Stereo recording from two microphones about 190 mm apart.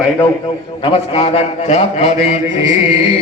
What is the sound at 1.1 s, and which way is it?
A man's voice, 30° left (ahead or behind).